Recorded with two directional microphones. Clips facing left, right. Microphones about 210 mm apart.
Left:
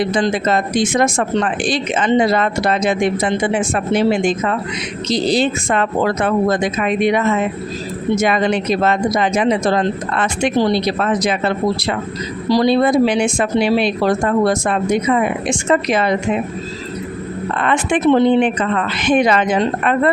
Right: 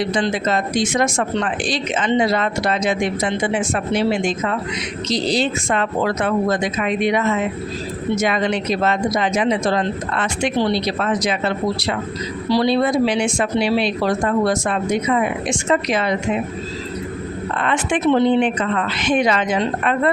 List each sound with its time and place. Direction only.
0.0 s speech: 50° left (ahead or behind)
17.6 s speech: 55° left (ahead or behind)